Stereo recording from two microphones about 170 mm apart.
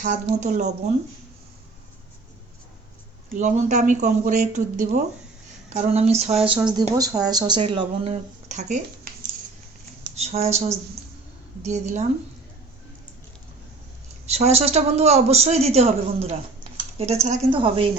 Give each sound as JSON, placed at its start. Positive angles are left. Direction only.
{"t": 0.0, "sound": "speech", "side_deg": -45}
{"t": 3.3, "sound": "a woman's voice", "side_deg": -45}
{"t": 6.7, "sound": "speech", "side_deg": -25}
{"t": 8.4, "sound": "speech", "side_deg": -45}
{"t": 10.2, "sound": "a woman's voice", "side_deg": -40}
{"t": 14.3, "sound": "a woman's voice", "side_deg": -40}
{"t": 17.5, "sound": "a woman's voice", "side_deg": -30}